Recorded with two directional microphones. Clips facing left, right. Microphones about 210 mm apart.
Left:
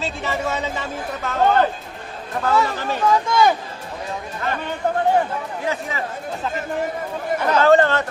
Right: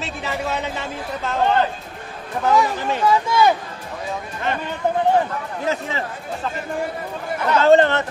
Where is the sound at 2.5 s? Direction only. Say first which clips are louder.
Right 2 dB; 15° right (ahead or behind).